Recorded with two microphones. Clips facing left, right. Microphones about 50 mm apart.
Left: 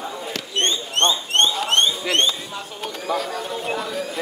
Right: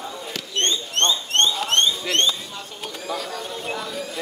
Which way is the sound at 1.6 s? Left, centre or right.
Centre.